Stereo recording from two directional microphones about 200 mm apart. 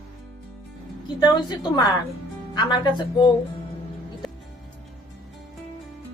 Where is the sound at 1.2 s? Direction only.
20° left (ahead or behind).